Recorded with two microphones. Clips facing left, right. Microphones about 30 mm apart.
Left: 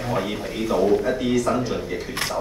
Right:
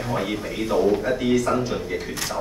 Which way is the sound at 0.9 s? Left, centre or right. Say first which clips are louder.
Even; centre.